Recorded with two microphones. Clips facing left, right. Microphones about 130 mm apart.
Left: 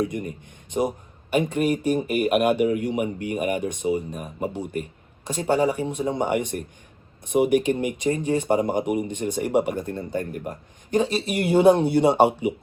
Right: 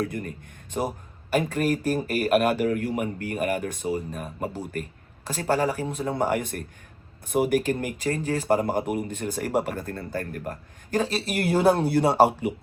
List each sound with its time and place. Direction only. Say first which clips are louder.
0.0 s speech: left 3 dB; 15° left (ahead or behind)
0.8 s speech: left 4 dB; centre (ahead or behind)
9.8 s speech: left 3 dB; 20° left (ahead or behind)
11.0 s speech: left 2 dB; centre (ahead or behind)